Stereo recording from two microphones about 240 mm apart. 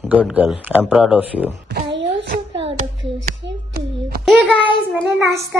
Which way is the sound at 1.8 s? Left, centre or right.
Right.